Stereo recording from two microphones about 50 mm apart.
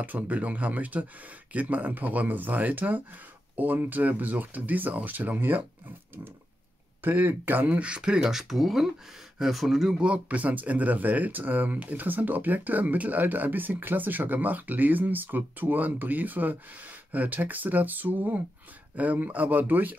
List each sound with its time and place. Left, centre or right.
0.0 s speech: right
7.0 s speech: right; by 9.9 s centre
9.9 s speech: right